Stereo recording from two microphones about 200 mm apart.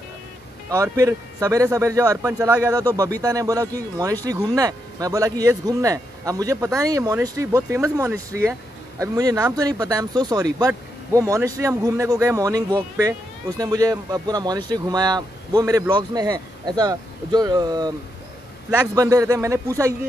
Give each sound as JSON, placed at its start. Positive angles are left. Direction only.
{"t": 0.9, "sound": "a man's voice", "side_deg": -15}